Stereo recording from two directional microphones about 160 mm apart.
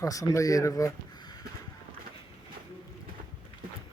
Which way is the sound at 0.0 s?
20° left (ahead or behind).